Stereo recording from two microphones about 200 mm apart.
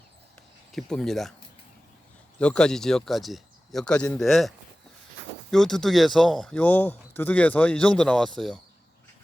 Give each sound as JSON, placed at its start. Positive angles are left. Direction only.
{"t": 0.7, "sound": "speech", "side_deg": 0}
{"t": 2.4, "sound": "speech", "side_deg": 5}